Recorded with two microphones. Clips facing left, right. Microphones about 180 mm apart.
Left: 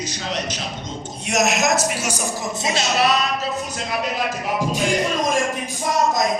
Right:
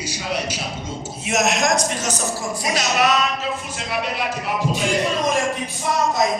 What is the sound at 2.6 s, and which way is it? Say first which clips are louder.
Music: even; 30° left (ahead or behind).